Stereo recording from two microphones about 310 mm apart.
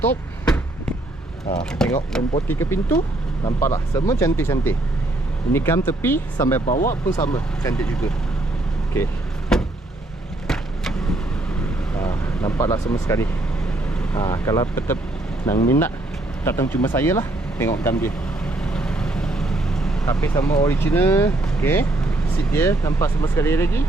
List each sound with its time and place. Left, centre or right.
0.0 s a sound: centre
1.8 s speech: centre
6.7 s speech: left
7.1 s speech: centre
9.5 s vehicle: centre
11.9 s speech: centre